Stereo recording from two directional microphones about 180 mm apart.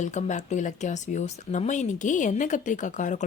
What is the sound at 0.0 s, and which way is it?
Speech, 40° left (ahead or behind).